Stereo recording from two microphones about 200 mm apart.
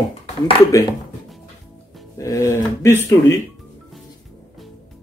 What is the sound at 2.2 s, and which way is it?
Speech, 15° left (ahead or behind).